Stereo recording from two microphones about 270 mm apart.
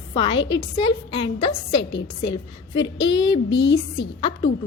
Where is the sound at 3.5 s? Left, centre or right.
Left.